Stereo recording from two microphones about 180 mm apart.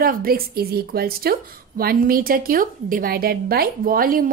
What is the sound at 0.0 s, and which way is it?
A woman's voice, 55° right (ahead or behind).